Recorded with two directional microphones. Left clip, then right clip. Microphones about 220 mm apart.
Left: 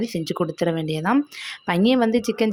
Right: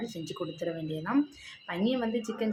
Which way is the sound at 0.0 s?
40° left (ahead or behind).